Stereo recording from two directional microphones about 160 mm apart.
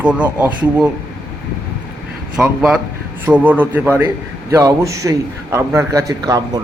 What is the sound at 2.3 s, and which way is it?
A man's voice, 5° right (ahead or behind).